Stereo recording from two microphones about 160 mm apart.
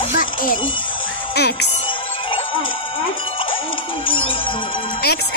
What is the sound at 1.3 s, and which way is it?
Speech, 90° left.